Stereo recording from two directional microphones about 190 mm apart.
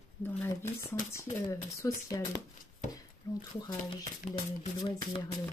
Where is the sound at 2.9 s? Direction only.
20° left (ahead or behind).